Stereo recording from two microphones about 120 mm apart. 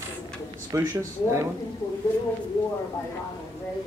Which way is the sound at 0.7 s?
25° right (ahead or behind).